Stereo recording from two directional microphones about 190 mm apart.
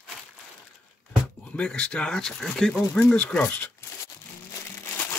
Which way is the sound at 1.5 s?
5° left (ahead or behind).